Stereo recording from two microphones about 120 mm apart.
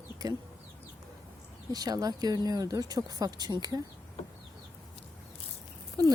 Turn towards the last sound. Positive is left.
turn(degrees=-30)  # may be behind; listen again after turning